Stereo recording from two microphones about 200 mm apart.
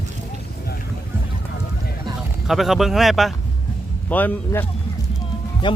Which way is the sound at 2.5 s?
Centre (ahead or behind).